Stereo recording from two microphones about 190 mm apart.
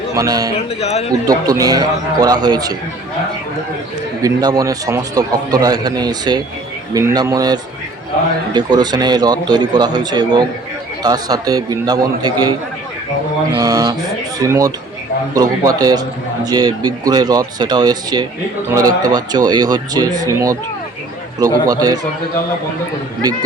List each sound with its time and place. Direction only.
0.2 s a man's voice: 20° right (ahead or behind)
0.5 s speech: 35° left (ahead or behind)
1.1 s a man's voice: 20° right (ahead or behind)
4.2 s a man's voice: 20° right (ahead or behind)
13.6 s a man's voice: 20° right (ahead or behind)
21.7 s a man's voice: 20° right (ahead or behind)